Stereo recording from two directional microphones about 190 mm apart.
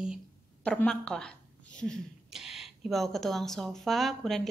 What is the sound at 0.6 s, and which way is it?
Speech, 5° left (ahead or behind).